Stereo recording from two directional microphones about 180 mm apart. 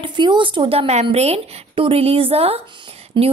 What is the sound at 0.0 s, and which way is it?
A woman's voice, 25° right (ahead or behind).